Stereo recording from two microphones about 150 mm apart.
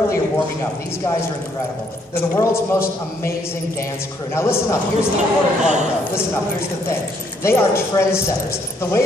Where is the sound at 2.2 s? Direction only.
15° left (ahead or behind).